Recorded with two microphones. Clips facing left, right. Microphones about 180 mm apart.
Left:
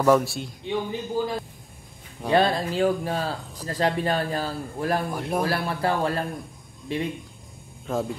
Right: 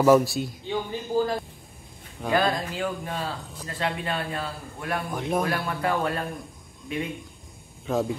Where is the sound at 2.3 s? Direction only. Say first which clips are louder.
Left 4 dB; 30° left (ahead or behind).